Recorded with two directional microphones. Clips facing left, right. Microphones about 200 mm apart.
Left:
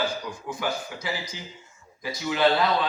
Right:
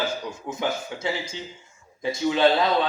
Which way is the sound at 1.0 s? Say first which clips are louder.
Right 4 dB; 25° right (ahead or behind).